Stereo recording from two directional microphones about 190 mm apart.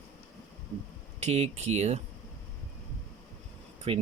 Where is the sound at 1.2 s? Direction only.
35° right (ahead or behind).